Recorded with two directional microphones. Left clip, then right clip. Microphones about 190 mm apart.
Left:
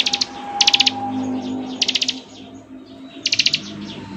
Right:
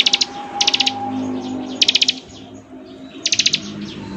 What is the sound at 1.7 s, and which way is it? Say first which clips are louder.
Bird: right 5 dB; 20° right (ahead or behind).